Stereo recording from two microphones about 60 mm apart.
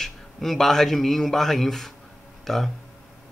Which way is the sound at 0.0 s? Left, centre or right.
Centre.